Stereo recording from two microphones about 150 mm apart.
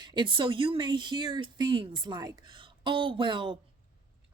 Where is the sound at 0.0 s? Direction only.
30° right (ahead or behind).